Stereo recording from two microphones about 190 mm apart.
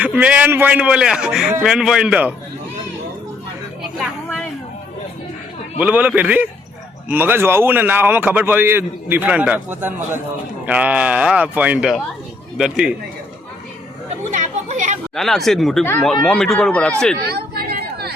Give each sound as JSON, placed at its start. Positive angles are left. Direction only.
{"t": 0.0, "sound": "speech", "side_deg": -5}
{"t": 5.8, "sound": "a man's voice", "side_deg": -10}
{"t": 14.3, "sound": "chatter", "side_deg": -40}
{"t": 15.1, "sound": "speech", "side_deg": 0}
{"t": 17.2, "sound": "chatter", "side_deg": -55}